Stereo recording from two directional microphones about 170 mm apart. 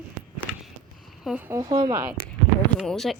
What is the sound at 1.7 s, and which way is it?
Speech, 25° right (ahead or behind).